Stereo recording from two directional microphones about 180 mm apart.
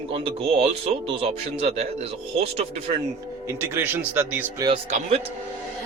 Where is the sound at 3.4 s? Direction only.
15° right (ahead or behind).